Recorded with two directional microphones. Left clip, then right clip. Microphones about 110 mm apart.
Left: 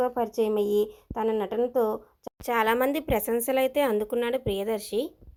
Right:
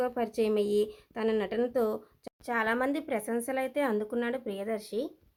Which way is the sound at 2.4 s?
35° left (ahead or behind).